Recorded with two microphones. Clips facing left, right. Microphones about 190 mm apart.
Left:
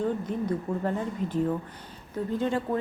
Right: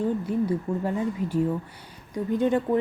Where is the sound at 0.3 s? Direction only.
10° right (ahead or behind).